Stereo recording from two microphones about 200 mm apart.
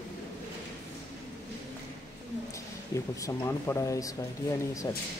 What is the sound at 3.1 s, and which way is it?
Speech, 15° left (ahead or behind).